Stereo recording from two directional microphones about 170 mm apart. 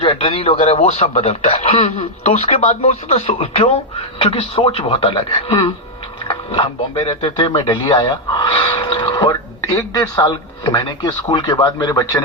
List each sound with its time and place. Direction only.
0.0 s speech: 30° left (ahead or behind)
6.2 s a sound: 30° left (ahead or behind)
7.1 s speech: 30° left (ahead or behind)